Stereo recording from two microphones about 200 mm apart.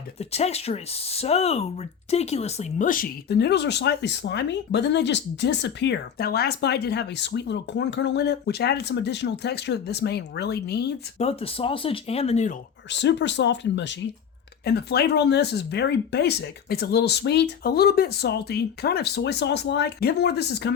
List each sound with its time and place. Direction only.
0.2 s speech: 30° left (ahead or behind); by 10.9 s 55° left (ahead or behind)
11.2 s speech: 30° left (ahead or behind)
12.9 s speech: 60° left (ahead or behind)